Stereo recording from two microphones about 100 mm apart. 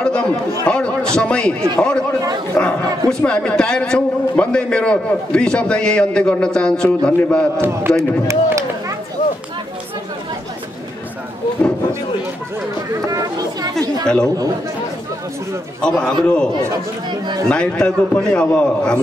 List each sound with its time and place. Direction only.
0.0 s chatter: 10° left (ahead or behind)
1.1 s a man's voice: 10° left (ahead or behind)
7.5 s a man's voice: 25° right (ahead or behind)
13.1 s chatter: 35° right (ahead or behind)
15.8 s a man's voice: 10° left (ahead or behind)
17.5 s a man's voice: 10° left (ahead or behind)